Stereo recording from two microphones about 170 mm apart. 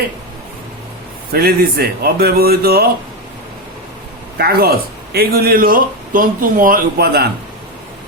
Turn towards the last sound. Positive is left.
turn(degrees=-65)  # may be behind; listen again after turning